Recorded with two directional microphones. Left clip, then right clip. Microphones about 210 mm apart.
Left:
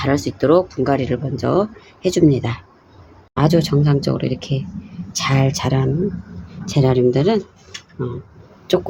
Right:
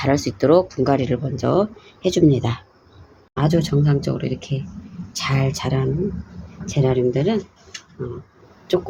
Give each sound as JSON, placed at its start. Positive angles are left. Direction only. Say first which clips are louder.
{"t": 0.0, "sound": "speech", "louder": "left 1 dB", "side_deg": 0}
{"t": 3.3, "sound": "speech", "louder": "left 4 dB", "side_deg": 20}